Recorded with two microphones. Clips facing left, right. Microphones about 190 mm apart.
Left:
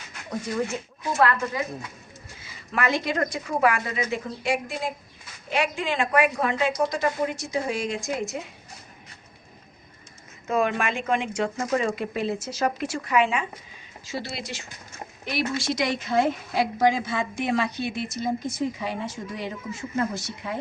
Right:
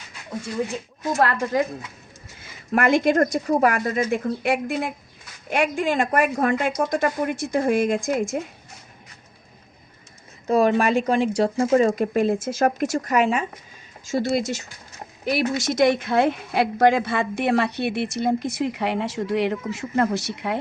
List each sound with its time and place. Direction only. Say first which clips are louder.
2.4 s a woman's voice: right 6 dB; 50° right (ahead or behind)
10.4 s speech: right 6 dB; 35° right (ahead or behind)
11.9 s a woman's voice: right 7 dB; 45° right (ahead or behind); by 20.6 s 70° right (ahead or behind)